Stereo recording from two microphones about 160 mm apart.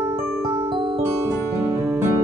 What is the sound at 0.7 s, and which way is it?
Music, 30° right (ahead or behind).